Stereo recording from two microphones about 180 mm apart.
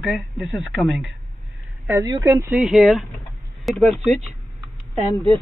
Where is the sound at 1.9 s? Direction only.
20° right (ahead or behind).